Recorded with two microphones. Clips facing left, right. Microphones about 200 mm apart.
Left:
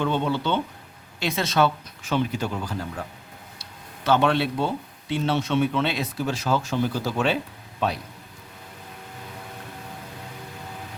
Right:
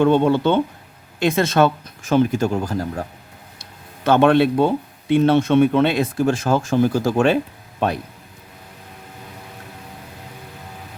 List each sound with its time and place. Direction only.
0.0 s speech: 50° right (ahead or behind)
3.6 s speech: 50° right (ahead or behind)